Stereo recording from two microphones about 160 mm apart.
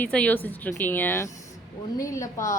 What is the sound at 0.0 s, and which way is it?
A woman's voice, 10° left (ahead or behind).